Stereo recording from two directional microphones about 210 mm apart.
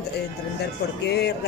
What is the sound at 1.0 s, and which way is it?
Speech, 50° left (ahead or behind).